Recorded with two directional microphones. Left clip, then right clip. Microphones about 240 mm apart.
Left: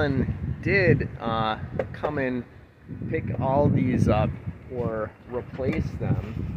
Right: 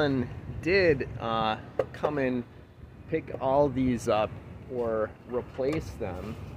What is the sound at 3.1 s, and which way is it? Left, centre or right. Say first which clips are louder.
Speech: left 1 dB; centre.